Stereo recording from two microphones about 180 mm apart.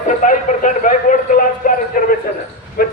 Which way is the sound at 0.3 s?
45° left (ahead or behind).